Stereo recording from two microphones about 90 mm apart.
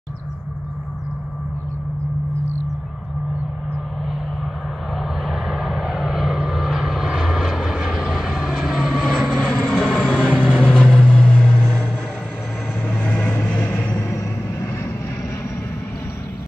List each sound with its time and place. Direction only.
4.9 s vehicle: centre (ahead or behind)
13.0 s vehicle: 20° left (ahead or behind)